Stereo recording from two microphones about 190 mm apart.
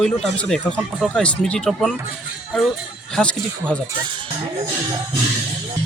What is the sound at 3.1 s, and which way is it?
Speech, 5° left (ahead or behind).